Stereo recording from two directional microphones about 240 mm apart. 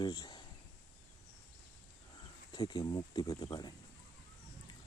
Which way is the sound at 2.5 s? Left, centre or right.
Centre.